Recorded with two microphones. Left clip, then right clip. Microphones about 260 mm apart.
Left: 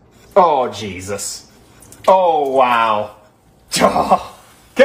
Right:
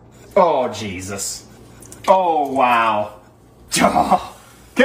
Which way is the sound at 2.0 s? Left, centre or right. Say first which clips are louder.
Left 3 dB; left.